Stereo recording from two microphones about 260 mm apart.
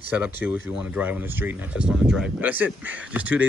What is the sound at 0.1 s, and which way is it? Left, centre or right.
Speech, centre.